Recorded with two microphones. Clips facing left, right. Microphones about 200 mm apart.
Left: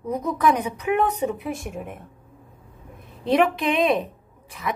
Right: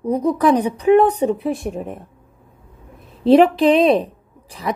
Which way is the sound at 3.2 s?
35° right (ahead or behind).